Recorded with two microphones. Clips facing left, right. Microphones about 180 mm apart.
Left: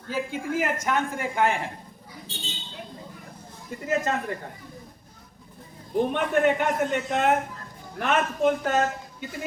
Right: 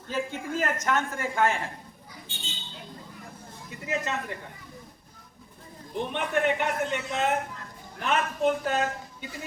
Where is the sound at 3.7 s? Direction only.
45° left (ahead or behind).